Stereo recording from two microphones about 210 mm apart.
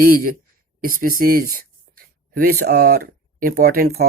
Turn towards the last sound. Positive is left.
turn(degrees=-45)  # may be behind; listen again after turning